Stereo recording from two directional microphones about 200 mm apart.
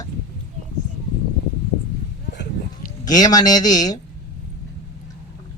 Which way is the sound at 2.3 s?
60° left (ahead or behind).